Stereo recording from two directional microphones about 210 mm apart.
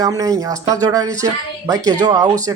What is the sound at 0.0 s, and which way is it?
Speech, 15° right (ahead or behind).